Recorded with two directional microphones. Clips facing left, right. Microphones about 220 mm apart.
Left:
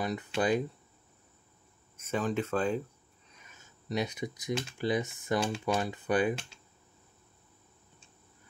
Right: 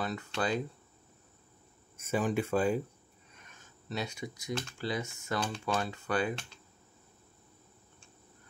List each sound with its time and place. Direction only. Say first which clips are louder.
0.0 s speech: left 3 dB; 15° left (ahead or behind)
2.0 s speech: right 1 dB; 10° right (ahead or behind)
3.9 s speech: left 4 dB; 20° left (ahead or behind)